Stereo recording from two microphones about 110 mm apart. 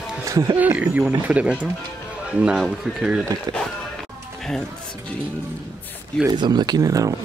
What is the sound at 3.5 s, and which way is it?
Speech, 35° right (ahead or behind).